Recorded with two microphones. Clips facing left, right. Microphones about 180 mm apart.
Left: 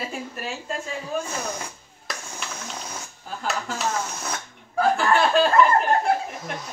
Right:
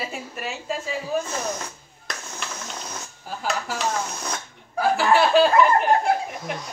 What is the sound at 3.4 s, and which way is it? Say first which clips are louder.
Speech: right 1 dB; centre (ahead or behind).